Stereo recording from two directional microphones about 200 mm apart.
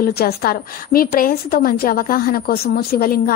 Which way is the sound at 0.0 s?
50° left (ahead or behind).